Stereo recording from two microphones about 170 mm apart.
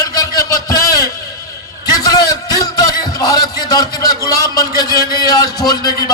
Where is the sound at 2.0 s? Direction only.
20° left (ahead or behind).